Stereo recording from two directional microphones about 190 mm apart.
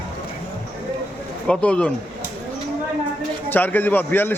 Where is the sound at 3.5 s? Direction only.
10° left (ahead or behind).